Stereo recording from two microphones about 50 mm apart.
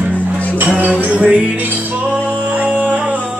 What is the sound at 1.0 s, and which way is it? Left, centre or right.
Music, right.